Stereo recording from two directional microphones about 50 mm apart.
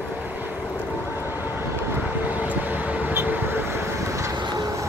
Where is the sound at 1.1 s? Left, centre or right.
Right.